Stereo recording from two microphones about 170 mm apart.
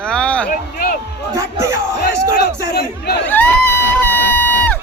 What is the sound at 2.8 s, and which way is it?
Speech, 75° left (ahead or behind).